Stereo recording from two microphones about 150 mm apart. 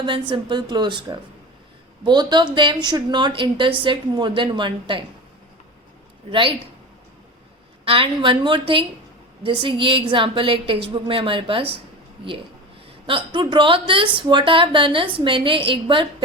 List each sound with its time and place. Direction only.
0.0 s a woman's voice: 35° right (ahead or behind)
7.9 s a woman's voice: 35° right (ahead or behind)
13.1 s a woman's voice: 35° right (ahead or behind)